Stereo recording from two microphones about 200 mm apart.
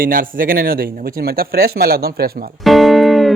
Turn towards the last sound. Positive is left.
turn(degrees=0)  # may be behind; listen again after turning